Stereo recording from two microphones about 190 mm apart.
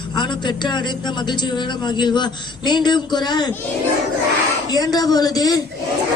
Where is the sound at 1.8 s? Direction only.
25° left (ahead or behind).